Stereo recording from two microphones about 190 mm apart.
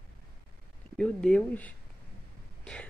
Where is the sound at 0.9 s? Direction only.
5° left (ahead or behind).